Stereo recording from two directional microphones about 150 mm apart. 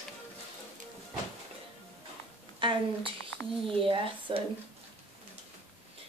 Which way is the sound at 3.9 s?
35° right (ahead or behind).